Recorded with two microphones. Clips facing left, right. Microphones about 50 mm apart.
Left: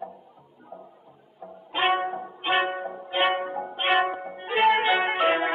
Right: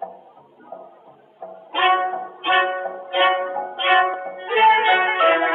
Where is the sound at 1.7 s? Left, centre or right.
Right.